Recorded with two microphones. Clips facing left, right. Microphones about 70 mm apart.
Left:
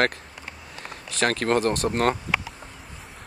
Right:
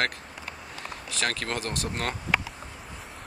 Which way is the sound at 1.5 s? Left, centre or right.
Left.